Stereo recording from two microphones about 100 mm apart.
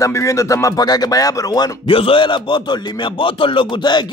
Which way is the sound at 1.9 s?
65° left (ahead or behind).